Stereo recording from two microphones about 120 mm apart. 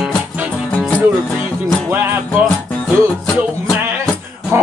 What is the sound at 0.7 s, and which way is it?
Music, 15° left (ahead or behind).